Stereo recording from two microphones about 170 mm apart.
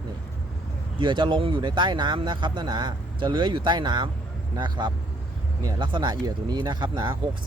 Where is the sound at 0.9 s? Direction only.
30° right (ahead or behind).